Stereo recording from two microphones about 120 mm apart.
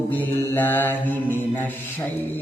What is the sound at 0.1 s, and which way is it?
Mantra, 15° left (ahead or behind).